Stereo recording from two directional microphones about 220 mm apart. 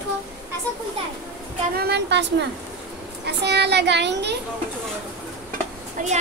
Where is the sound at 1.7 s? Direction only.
45° right (ahead or behind).